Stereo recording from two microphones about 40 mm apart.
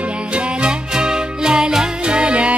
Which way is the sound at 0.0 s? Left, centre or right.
Right.